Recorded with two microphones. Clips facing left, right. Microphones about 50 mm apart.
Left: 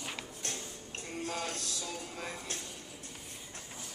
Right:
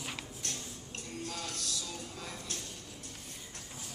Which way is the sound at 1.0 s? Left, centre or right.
Left.